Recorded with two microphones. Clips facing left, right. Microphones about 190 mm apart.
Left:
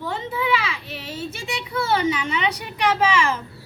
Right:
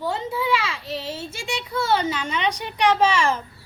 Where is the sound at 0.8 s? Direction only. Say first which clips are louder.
Right 3 dB; 30° right (ahead or behind).